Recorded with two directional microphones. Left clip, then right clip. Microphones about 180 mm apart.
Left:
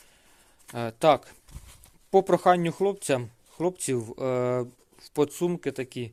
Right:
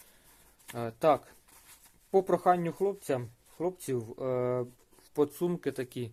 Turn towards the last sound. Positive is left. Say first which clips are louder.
# left 3 dB
turn(degrees=20)  # may be behind; listen again after turning